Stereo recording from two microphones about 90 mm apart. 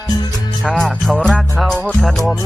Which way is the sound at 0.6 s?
5° left (ahead or behind).